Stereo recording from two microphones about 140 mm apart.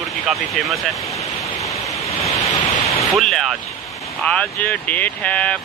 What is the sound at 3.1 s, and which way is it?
Speech, centre (ahead or behind).